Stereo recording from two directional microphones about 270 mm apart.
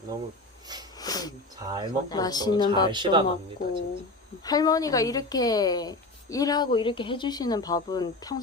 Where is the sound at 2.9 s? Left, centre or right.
Centre.